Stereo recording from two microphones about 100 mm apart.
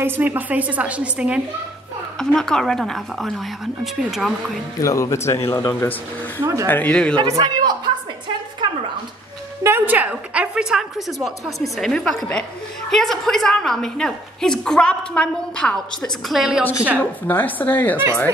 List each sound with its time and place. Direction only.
0.0 s a woman's voice: 20° right (ahead or behind)
2.1 s a woman's voice: 5° left (ahead or behind)
4.7 s a woman's voice: 35° left (ahead or behind); by 6.4 s 20° left (ahead or behind)
6.4 s speech: 35° right (ahead or behind)
6.7 s speech: 15° left (ahead or behind)
7.2 s a man's voice: 40° right (ahead or behind)
9.6 s a woman's voice: 25° right (ahead or behind); by 16.6 s 5° right (ahead or behind)
17.0 s a woman's voice: 20° left (ahead or behind)